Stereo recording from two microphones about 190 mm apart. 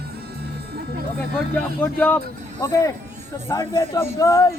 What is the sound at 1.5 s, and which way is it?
Speech, 10° left (ahead or behind).